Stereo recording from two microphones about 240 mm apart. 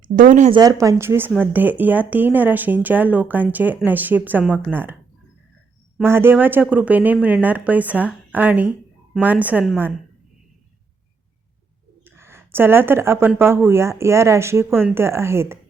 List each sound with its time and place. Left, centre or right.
0.0 s speech: right
0.6 s speech: centre
6.0 s speech: centre
12.0 s speech: centre